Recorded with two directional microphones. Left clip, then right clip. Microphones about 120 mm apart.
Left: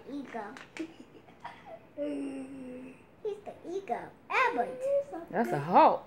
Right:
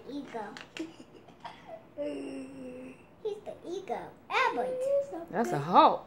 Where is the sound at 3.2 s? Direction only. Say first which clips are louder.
Right 1 dB; 40° left (ahead or behind).